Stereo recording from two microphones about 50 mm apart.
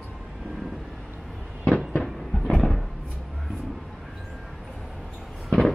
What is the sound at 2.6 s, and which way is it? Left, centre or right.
Cupboard open or close, centre.